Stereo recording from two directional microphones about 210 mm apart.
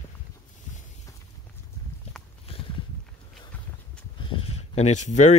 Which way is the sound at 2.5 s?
25° left (ahead or behind).